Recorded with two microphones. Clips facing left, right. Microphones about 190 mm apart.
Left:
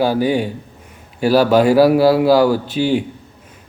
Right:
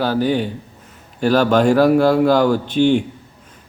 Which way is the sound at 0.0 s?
10° left (ahead or behind).